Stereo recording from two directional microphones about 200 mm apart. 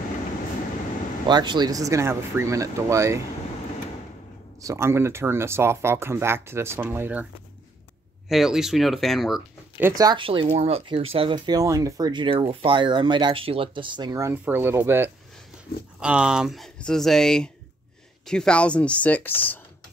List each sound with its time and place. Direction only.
1.2 s speech: 25° right (ahead or behind)
4.6 s speech: 15° right (ahead or behind)
8.3 s speech: centre (ahead or behind)